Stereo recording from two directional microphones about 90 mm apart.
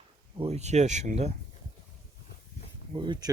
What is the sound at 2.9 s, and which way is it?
Speech, 60° right (ahead or behind).